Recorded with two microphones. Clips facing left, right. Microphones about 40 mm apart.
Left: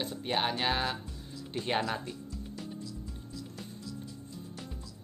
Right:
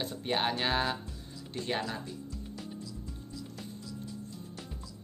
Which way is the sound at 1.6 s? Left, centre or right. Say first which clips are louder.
Left 3 dB; left.